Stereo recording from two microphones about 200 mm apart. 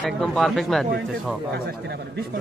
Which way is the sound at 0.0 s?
Centre (ahead or behind).